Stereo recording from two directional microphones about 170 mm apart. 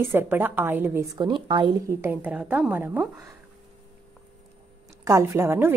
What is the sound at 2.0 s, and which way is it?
A woman's voice, 10° right (ahead or behind).